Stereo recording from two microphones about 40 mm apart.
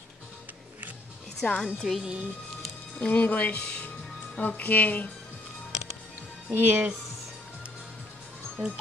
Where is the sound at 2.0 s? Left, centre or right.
Right.